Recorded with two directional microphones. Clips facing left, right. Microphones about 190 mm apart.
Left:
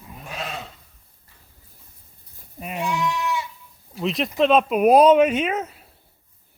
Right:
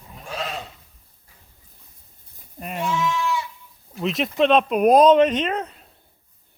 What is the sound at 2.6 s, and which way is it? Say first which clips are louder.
Speech: even; centre (ahead or behind).